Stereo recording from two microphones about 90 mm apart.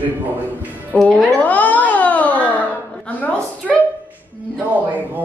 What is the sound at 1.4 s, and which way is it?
Music, 15° left (ahead or behind).